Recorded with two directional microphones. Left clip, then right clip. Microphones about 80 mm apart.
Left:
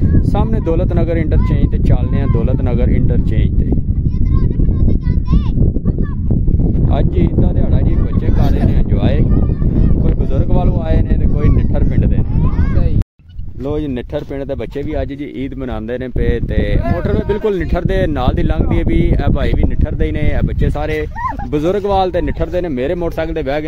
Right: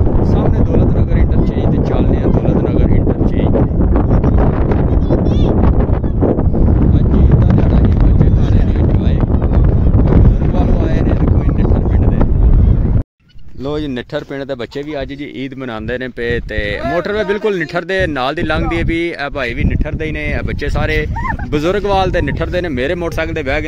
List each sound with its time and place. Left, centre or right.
0.3 s vehicle: centre
5.3 s a sound: right
10.6 s wind noise: centre
16.9 s speech: left
21.5 s speech: centre